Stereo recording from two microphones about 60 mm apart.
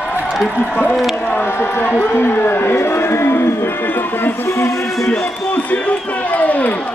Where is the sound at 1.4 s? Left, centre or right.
Left.